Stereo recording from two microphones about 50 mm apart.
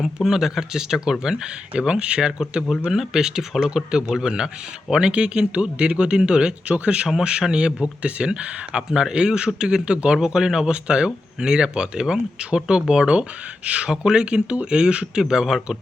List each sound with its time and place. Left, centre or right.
0.0 s speech: centre